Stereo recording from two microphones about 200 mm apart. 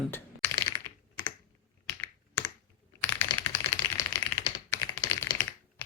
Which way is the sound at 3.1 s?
10° left (ahead or behind).